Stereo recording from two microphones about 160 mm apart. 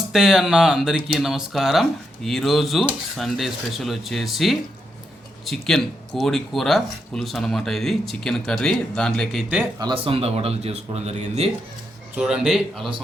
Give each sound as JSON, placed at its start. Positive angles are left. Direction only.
{"t": 0.1, "sound": "speech", "side_deg": 0}
{"t": 9.7, "sound": "speech", "side_deg": -30}
{"t": 12.1, "sound": "speech", "side_deg": -5}